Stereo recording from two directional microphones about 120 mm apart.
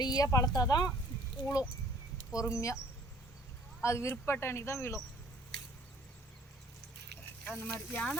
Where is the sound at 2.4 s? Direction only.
25° left (ahead or behind).